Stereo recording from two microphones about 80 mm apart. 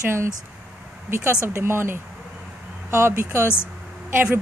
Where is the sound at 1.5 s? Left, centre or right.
Right.